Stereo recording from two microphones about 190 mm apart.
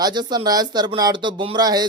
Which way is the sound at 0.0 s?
20° right (ahead or behind).